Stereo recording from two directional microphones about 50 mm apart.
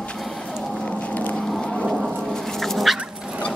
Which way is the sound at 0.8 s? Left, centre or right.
Left.